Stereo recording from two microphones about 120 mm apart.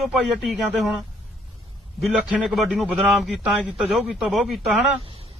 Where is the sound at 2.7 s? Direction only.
10° right (ahead or behind).